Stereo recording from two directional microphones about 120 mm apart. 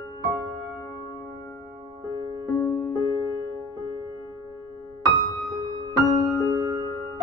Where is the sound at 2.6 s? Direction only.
20° left (ahead or behind).